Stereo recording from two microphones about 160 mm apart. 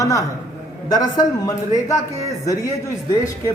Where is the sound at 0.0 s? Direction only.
20° left (ahead or behind).